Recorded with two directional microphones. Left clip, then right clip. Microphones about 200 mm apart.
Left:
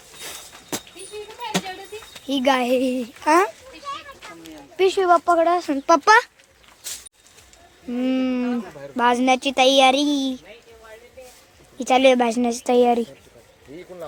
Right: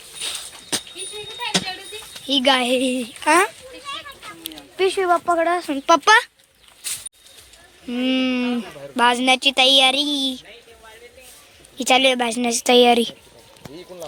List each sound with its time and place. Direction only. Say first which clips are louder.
0.2 s a sound: right 8 dB; 15° left (ahead or behind)
2.2 s speech: right 2 dB; 5° left (ahead or behind)
4.8 s speech: left 2 dB; 15° left (ahead or behind)
7.9 s speech: right 2 dB; centre (ahead or behind)
11.8 s speech: left 1 dB; centre (ahead or behind)